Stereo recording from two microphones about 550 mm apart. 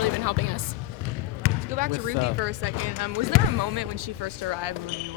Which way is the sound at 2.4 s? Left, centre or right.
Right.